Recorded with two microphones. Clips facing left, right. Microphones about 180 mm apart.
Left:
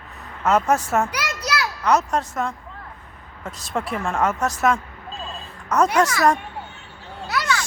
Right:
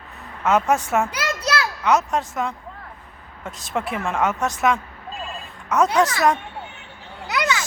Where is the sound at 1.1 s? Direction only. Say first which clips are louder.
Right 2 dB; 25° right (ahead or behind).